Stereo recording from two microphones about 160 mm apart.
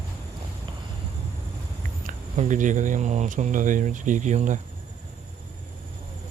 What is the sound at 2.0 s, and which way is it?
Speech, 50° right (ahead or behind).